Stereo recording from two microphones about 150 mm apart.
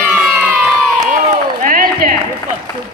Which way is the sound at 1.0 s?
60° right (ahead or behind).